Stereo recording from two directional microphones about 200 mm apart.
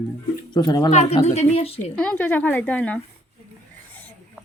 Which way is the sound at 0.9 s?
35° left (ahead or behind).